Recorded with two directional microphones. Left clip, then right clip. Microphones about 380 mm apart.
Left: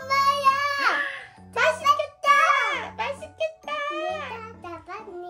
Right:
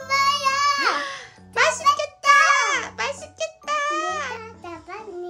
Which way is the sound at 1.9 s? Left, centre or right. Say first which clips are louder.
Right 3 dB; centre.